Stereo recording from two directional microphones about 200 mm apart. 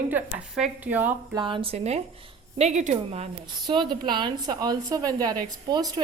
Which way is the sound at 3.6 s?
20° right (ahead or behind).